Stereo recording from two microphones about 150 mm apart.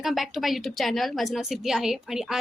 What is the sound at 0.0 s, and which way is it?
A woman's voice, centre (ahead or behind).